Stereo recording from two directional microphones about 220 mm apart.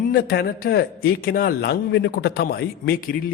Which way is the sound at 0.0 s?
40° left (ahead or behind).